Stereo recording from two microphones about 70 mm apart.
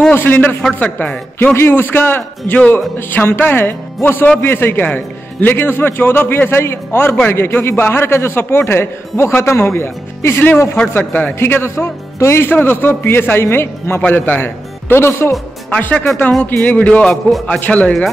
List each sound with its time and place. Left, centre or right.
0.1 s a man's voice: left
15.7 s a man's voice: centre